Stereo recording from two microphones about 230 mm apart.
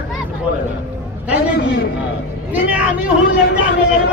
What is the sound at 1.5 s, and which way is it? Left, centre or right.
Speech, left.